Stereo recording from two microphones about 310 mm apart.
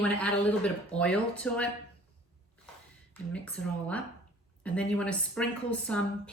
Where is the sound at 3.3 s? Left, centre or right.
Centre.